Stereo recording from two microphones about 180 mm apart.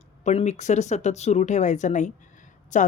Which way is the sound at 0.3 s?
40° left (ahead or behind).